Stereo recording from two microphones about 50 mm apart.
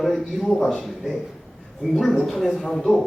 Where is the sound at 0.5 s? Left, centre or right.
Centre.